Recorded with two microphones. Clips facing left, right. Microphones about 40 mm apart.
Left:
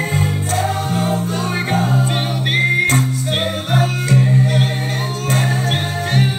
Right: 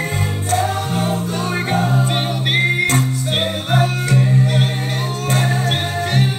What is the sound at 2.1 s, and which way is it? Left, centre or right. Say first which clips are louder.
Music: even; right.